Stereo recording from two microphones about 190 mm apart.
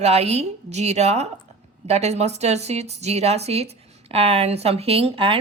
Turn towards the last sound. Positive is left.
turn(degrees=-30)  # may be behind; listen again after turning